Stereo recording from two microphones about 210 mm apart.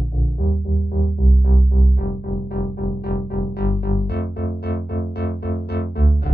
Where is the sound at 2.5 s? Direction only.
50° left (ahead or behind).